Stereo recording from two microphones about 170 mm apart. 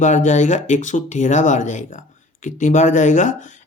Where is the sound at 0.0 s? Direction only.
45° left (ahead or behind).